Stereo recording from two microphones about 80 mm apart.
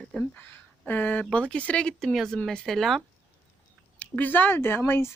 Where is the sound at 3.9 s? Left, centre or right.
Centre.